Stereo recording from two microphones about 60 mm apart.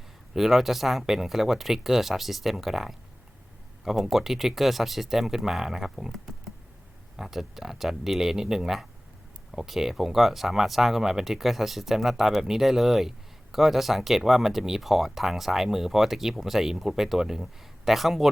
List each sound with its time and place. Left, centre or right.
0.3 s speech: centre